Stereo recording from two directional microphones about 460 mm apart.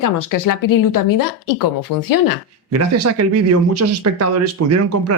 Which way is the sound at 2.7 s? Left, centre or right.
Right.